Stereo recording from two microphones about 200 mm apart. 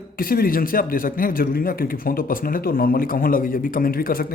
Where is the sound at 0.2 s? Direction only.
45° left (ahead or behind).